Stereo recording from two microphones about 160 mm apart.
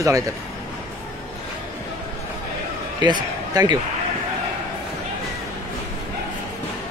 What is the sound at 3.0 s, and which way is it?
Speech, 25° right (ahead or behind).